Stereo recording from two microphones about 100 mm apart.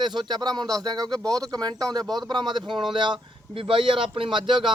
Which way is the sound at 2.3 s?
45° right (ahead or behind).